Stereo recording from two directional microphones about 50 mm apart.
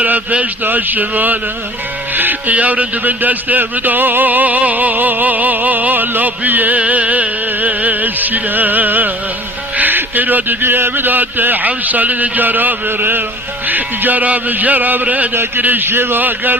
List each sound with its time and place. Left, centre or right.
0.0 s speech: right